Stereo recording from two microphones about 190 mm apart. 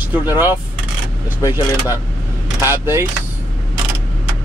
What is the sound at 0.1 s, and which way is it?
Speech, 10° right (ahead or behind).